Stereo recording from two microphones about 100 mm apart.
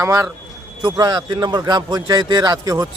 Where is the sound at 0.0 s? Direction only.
30° right (ahead or behind).